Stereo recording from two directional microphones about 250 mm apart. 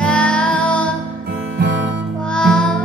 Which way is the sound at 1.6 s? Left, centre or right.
Right.